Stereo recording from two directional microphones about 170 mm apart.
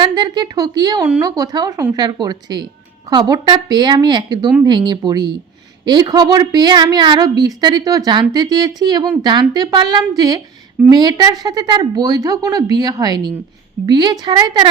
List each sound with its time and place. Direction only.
0.0 s a woman's voice: 25° right (ahead or behind)